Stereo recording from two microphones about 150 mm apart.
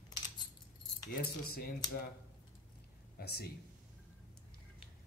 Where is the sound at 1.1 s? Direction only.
90° left.